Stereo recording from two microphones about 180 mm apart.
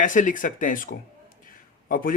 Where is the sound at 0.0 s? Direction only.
45° left (ahead or behind).